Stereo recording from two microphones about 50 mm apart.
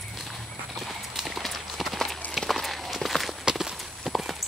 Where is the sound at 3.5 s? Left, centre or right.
Centre.